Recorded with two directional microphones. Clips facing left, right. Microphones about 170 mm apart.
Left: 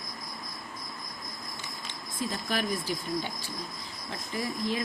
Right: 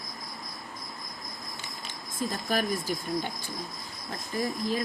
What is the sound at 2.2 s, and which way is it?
Speech, 45° right (ahead or behind).